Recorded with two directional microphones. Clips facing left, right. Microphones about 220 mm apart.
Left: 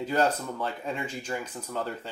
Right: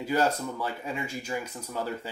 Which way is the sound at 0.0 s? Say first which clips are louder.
Even; 10° right (ahead or behind).